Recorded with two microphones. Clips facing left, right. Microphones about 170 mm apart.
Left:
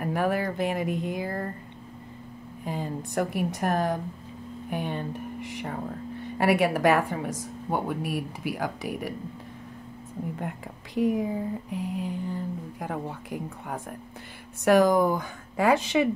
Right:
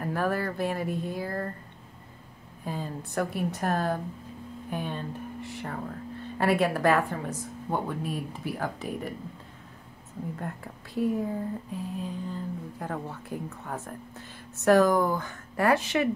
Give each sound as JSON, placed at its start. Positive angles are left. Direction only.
{"t": 0.0, "sound": "speech", "side_deg": 15}
{"t": 2.6, "sound": "a woman's voice", "side_deg": 15}
{"t": 10.4, "sound": "speech", "side_deg": 15}